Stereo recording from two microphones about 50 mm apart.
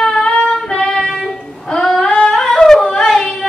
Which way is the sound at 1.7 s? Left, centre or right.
Centre.